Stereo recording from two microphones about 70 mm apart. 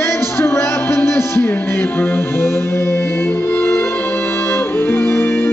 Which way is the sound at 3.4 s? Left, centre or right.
Left.